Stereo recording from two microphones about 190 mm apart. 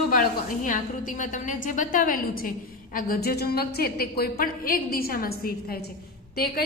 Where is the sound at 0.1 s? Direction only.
45° left (ahead or behind).